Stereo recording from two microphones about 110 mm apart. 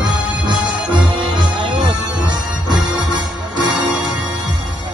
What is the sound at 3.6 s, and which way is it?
Music, 40° right (ahead or behind).